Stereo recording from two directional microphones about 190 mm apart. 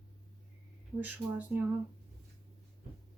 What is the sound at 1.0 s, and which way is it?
Speech, 10° right (ahead or behind).